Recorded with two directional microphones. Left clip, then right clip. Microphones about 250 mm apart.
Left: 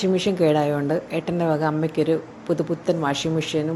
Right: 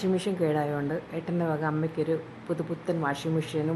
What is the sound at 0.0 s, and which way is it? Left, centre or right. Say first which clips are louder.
A woman's voice: left 8 dB; centre.